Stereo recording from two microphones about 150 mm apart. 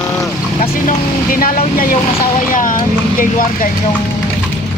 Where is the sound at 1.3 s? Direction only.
75° left (ahead or behind).